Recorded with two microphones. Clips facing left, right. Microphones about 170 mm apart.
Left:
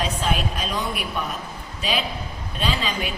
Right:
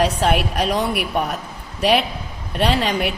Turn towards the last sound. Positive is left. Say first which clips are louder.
# right 6 dB
turn(degrees=-70)  # may be behind; listen again after turning